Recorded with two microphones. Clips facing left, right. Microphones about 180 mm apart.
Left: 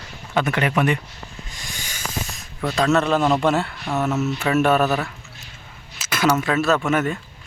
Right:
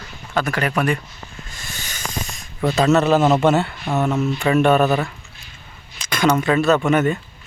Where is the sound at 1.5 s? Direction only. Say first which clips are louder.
Right 1 dB; 15° left (ahead or behind).